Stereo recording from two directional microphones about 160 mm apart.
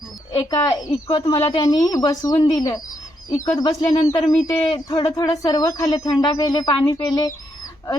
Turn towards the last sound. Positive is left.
turn(degrees=20)  # may be behind; listen again after turning